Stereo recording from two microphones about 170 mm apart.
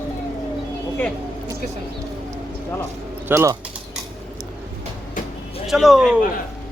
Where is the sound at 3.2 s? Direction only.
15° right (ahead or behind).